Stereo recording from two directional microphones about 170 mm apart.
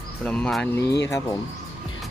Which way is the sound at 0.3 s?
5° left (ahead or behind).